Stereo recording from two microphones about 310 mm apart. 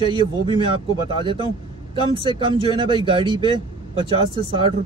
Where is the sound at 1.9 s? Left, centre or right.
Centre.